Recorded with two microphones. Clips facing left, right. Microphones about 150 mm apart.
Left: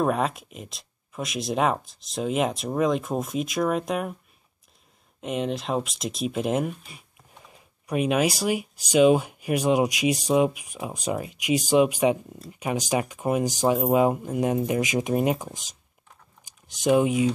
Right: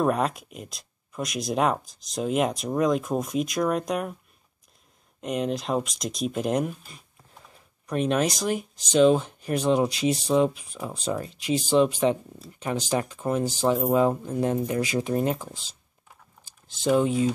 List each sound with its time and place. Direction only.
0.0 s speech: centre (ahead or behind)
5.2 s speech: centre (ahead or behind)
7.4 s speech: 10° left (ahead or behind)